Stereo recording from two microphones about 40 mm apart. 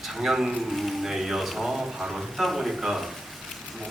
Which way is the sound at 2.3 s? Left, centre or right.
Centre.